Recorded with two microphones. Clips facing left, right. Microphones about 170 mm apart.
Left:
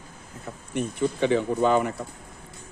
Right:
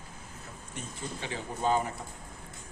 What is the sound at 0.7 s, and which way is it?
Speech, 65° left (ahead or behind).